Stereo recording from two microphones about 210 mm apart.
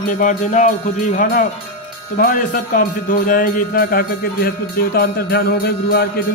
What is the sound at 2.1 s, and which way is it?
Speech, 40° left (ahead or behind).